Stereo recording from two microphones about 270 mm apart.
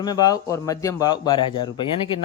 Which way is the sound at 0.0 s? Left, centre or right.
Centre.